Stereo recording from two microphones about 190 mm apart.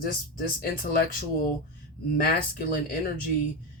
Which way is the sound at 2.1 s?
50° left (ahead or behind).